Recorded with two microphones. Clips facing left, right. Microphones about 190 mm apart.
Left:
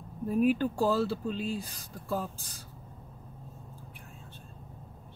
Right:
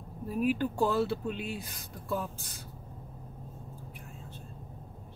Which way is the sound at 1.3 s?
60° right (ahead or behind).